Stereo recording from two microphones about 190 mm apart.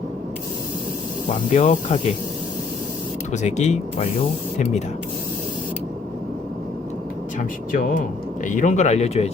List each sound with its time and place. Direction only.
1.3 s speech: 40° left (ahead or behind)
3.3 s speech: 35° left (ahead or behind)
7.3 s speech: 45° left (ahead or behind)